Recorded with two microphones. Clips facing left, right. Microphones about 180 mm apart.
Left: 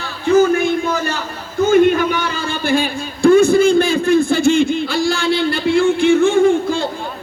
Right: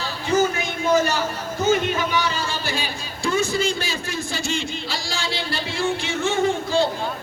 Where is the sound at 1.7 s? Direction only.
55° left (ahead or behind).